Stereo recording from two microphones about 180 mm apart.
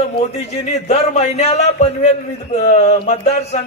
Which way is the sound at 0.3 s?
35° left (ahead or behind).